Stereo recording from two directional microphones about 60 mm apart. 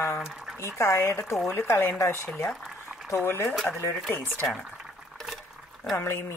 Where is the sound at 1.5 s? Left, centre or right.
Left.